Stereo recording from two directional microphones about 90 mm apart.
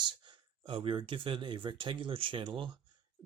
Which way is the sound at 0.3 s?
65° right (ahead or behind).